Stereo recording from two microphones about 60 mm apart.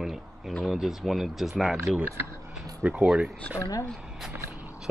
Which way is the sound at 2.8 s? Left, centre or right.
Right.